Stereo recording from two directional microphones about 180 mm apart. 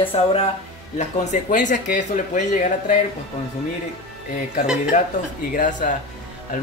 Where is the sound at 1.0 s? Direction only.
40° left (ahead or behind).